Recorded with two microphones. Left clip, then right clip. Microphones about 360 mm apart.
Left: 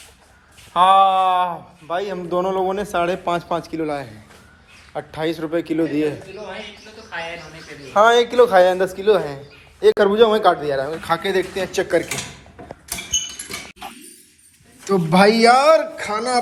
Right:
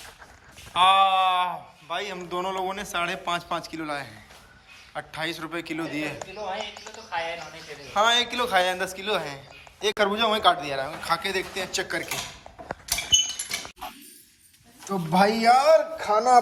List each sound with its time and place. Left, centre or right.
0.8 s speech: centre
7.9 s speech: centre
14.8 s speech: centre
15.8 s a man's voice: centre